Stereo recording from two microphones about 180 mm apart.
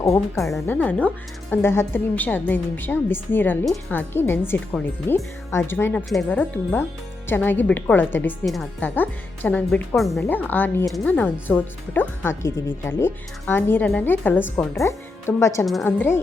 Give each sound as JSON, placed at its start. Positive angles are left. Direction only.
{"t": 0.7, "sound": "speech", "side_deg": 10}
{"t": 8.4, "sound": "speech", "side_deg": 0}